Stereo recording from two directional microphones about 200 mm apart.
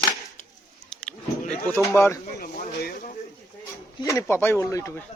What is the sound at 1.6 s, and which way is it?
Speech, 10° left (ahead or behind).